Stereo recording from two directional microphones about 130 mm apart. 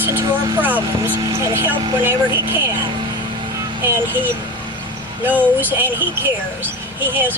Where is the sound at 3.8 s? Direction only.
15° right (ahead or behind).